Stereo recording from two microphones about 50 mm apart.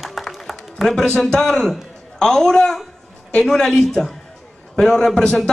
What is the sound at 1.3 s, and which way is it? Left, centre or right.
A man's voice, centre.